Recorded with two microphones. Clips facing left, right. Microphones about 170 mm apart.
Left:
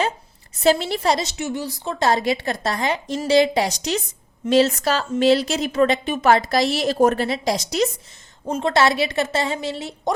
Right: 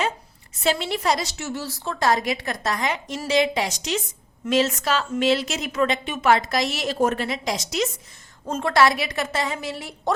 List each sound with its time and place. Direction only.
0.6 s a woman's voice: 35° left (ahead or behind)
8.4 s a woman's voice: 10° left (ahead or behind)
8.7 s a woman's voice: 25° left (ahead or behind)